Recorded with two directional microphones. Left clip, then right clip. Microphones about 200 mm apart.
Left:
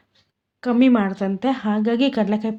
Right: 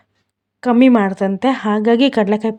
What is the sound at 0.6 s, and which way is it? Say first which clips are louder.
Speech: right 6 dB; 45° right (ahead or behind).